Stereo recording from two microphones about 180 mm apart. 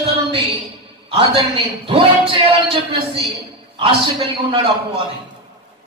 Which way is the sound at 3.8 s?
30° right (ahead or behind).